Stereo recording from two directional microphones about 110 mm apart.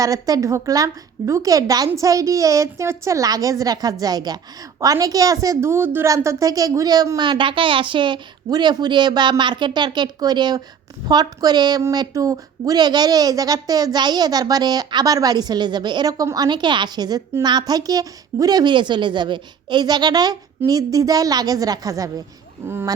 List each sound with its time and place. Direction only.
0.0 s a woman's voice: 30° right (ahead or behind)